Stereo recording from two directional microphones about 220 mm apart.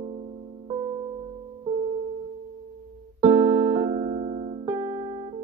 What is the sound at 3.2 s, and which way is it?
Music, 25° right (ahead or behind).